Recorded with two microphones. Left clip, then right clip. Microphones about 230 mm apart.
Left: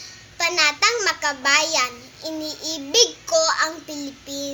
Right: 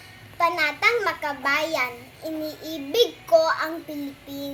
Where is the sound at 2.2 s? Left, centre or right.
Centre.